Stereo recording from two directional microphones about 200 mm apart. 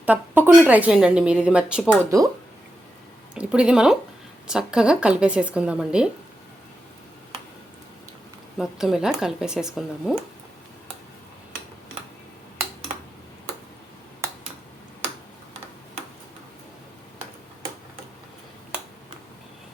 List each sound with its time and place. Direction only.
0.0 s a woman's voice: 10° right (ahead or behind)
2.0 s speech: 15° right (ahead or behind)
3.3 s a woman's voice: 5° right (ahead or behind)
8.5 s a woman's voice: centre (ahead or behind)